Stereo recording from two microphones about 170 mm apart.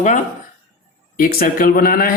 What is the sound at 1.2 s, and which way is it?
Speech, 55° left (ahead or behind).